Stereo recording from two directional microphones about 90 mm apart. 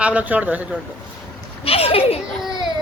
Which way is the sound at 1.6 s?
90° left.